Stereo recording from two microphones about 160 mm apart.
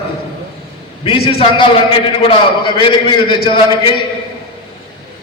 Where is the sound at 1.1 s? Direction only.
35° left (ahead or behind).